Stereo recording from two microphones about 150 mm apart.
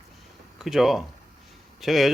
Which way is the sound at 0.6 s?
Centre (ahead or behind).